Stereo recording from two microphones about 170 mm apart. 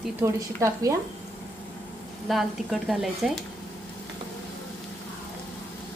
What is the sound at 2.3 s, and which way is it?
Speech, centre (ahead or behind).